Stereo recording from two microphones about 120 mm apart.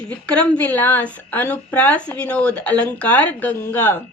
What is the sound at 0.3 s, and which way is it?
A woman's voice, 10° left (ahead or behind).